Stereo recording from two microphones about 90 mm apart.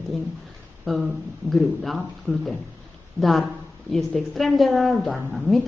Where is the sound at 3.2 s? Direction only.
Centre (ahead or behind).